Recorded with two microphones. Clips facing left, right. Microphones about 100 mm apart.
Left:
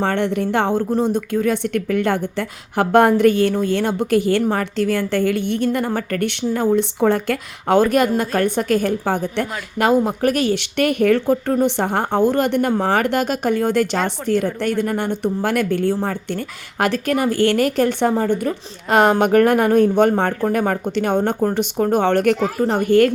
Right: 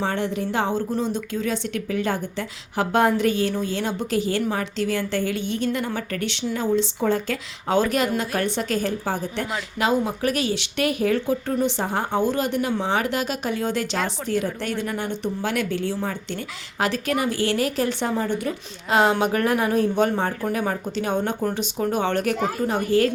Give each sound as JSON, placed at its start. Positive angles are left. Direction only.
{"t": 0.0, "sound": "a woman's voice", "side_deg": 60}